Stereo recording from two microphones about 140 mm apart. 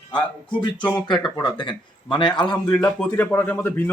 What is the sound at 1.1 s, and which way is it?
A man's voice, 30° left (ahead or behind).